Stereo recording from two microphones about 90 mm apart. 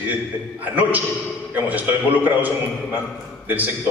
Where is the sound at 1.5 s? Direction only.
20° right (ahead or behind).